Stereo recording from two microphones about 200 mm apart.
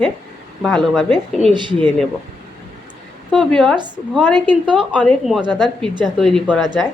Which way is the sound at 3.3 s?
5° left (ahead or behind).